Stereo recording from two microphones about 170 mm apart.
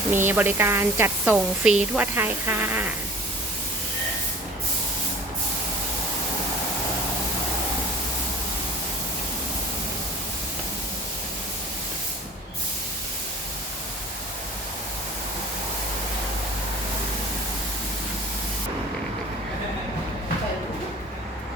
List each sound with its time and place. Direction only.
0.1 s a woman's voice: 10° right (ahead or behind)